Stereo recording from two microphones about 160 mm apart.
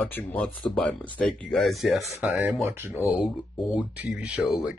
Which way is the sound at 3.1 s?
5° right (ahead or behind).